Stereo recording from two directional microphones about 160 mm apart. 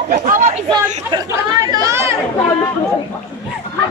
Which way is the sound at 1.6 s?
25° right (ahead or behind).